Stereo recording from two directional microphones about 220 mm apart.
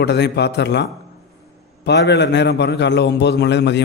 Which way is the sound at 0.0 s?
50° left (ahead or behind).